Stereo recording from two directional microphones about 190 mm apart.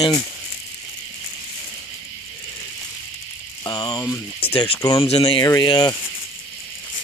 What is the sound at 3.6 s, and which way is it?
Speech, 20° left (ahead or behind).